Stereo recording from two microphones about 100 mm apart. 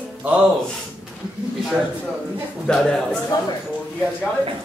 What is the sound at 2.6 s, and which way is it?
Speech, 5° left (ahead or behind).